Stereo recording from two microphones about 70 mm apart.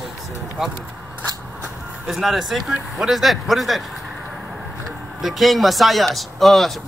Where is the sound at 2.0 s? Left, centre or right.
Centre.